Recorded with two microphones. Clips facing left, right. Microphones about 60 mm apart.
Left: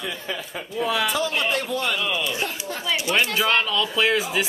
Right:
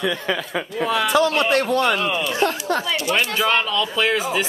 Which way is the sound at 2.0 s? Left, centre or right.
Right.